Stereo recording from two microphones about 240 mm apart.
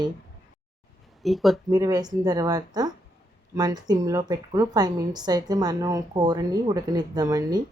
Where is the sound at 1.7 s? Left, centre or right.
Centre.